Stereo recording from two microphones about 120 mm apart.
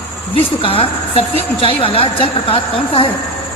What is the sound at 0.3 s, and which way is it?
A woman's voice, 50° left (ahead or behind).